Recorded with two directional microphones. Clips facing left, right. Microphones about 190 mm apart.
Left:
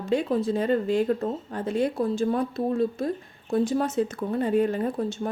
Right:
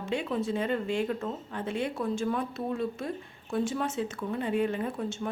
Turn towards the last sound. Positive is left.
turn(degrees=35)  # may be behind; listen again after turning